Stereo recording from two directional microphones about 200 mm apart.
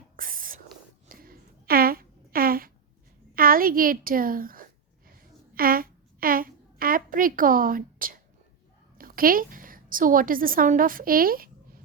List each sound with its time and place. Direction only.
0.2 s whispering: 45° right (ahead or behind)
1.0 s a sound: 45° right (ahead or behind)
9.0 s a woman's voice: 45° right (ahead or behind)